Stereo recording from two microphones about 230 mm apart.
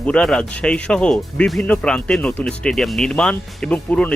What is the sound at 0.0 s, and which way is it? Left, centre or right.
Speech, centre.